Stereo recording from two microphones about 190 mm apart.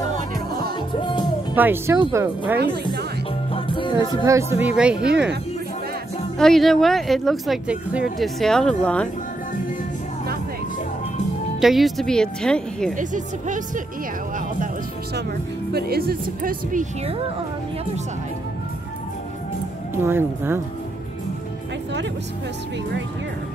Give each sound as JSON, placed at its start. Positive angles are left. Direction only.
{"t": 1.5, "sound": "speech", "side_deg": -10}
{"t": 2.7, "sound": "speech", "side_deg": -60}
{"t": 3.5, "sound": "music", "side_deg": 25}
{"t": 4.3, "sound": "speech", "side_deg": -15}
{"t": 6.3, "sound": "speech", "side_deg": 0}
{"t": 11.6, "sound": "speech", "side_deg": 0}
{"t": 12.9, "sound": "speech", "side_deg": -40}
{"t": 15.7, "sound": "speech", "side_deg": -55}
{"t": 20.0, "sound": "speech", "side_deg": -10}